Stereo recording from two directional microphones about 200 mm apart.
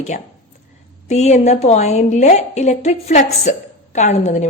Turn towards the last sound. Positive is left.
turn(degrees=35)  # may be behind; listen again after turning